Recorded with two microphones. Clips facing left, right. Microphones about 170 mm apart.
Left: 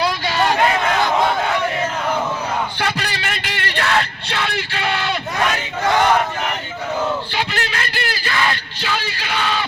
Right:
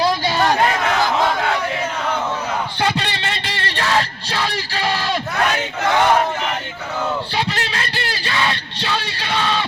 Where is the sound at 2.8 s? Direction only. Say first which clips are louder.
Right 2 dB; 25° right (ahead or behind).